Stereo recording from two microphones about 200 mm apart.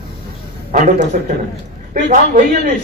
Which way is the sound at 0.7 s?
40° right (ahead or behind).